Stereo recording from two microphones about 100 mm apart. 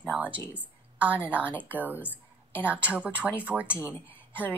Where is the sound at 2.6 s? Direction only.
15° right (ahead or behind).